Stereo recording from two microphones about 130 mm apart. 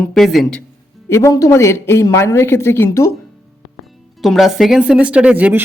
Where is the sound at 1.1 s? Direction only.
25° left (ahead or behind).